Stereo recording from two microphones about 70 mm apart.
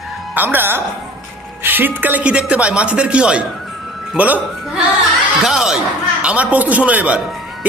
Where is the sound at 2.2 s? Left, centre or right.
Centre.